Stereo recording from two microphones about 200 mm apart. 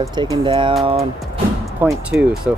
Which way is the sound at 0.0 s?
20° right (ahead or behind).